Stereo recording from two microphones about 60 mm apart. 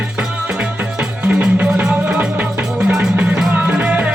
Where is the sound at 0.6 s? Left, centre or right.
Centre.